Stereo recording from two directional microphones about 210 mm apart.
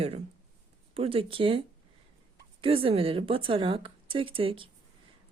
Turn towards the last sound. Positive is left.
turn(degrees=-25)  # may be behind; listen again after turning